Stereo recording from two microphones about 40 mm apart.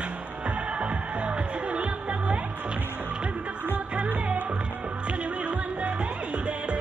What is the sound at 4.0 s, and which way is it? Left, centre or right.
Music, right.